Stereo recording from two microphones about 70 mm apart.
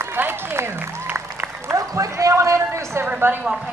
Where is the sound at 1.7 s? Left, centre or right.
Right.